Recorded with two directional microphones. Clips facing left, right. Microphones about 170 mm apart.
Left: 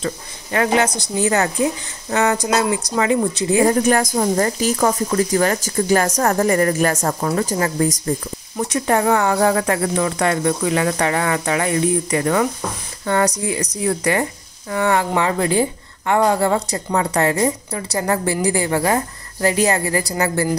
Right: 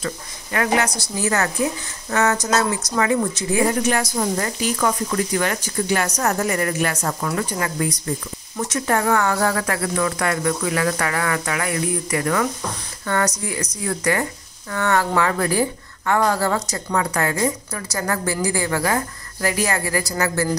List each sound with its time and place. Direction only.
0.0 s a woman's voice: 30° left (ahead or behind)
4.1 s speech: 40° left (ahead or behind)
6.3 s speech: 35° left (ahead or behind)
7.2 s speech: 35° left (ahead or behind)
8.6 s speech: 20° left (ahead or behind)